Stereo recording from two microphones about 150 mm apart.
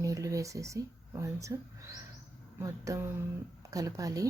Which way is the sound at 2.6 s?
20° right (ahead or behind).